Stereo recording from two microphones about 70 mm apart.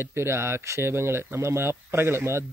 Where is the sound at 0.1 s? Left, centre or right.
Right.